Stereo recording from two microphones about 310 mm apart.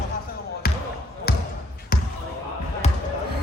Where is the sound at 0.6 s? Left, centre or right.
Left.